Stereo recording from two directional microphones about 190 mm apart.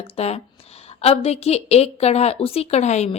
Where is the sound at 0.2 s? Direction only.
35° left (ahead or behind).